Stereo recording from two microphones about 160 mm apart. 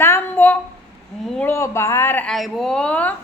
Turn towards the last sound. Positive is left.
turn(degrees=10)  # may be behind; listen again after turning